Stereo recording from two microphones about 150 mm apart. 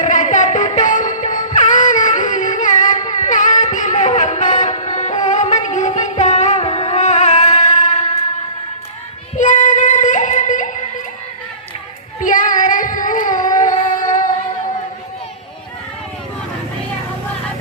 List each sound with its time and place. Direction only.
0.0 s music: 55° left (ahead or behind)
9.4 s singing: 55° left (ahead or behind)
12.2 s female singing: 60° left (ahead or behind)